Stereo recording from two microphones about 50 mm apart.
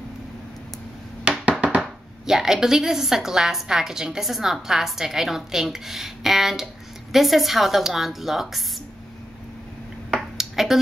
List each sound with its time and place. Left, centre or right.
1.6 s music: right
2.2 s a woman's voice: centre
10.1 s a sound: centre